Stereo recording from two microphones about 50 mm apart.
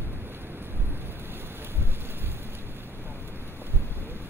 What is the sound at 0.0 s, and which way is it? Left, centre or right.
Boat, right.